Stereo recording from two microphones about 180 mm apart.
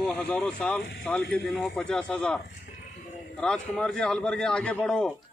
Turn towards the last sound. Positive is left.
turn(degrees=5)  # may be behind; listen again after turning